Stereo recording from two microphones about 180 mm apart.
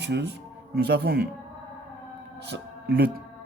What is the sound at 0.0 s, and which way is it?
Speech, 70° right (ahead or behind).